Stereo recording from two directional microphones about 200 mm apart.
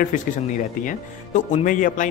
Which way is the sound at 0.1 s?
40° left (ahead or behind).